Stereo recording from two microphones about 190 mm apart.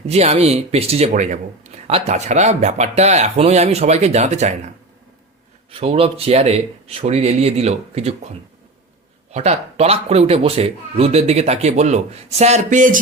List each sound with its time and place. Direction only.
0.1 s speech: 35° right (ahead or behind)
5.7 s speech: 30° right (ahead or behind)
9.3 s speech: 35° right (ahead or behind)